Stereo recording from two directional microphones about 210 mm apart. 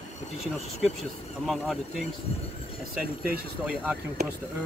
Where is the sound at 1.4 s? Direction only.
Centre (ahead or behind).